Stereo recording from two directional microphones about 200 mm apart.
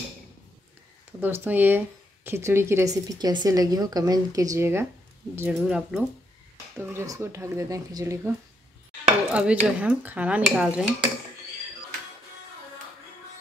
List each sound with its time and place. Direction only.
1.2 s speech: 10° right (ahead or behind)